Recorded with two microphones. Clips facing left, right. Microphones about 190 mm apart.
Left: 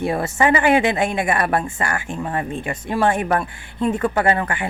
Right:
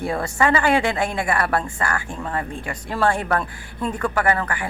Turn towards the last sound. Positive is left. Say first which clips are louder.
# left 2 dB
turn(degrees=25)  # may be behind; listen again after turning